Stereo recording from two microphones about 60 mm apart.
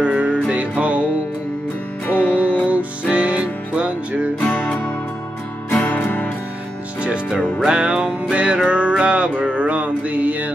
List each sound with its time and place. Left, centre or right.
0.0 s music: right
2.0 s music: left
2.7 s music: right
4.4 s music: left
5.7 s music: left
7.0 s music: centre